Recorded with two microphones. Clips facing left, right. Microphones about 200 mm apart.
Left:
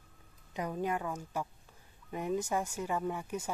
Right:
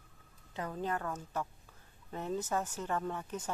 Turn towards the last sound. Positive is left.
turn(degrees=10)  # may be behind; listen again after turning